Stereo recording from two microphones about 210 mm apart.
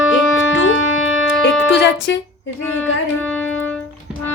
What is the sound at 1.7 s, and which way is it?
Speech, 55° left (ahead or behind).